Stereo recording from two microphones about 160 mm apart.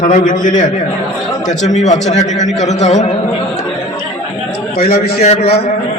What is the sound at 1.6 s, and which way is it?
A man's voice, 45° left (ahead or behind).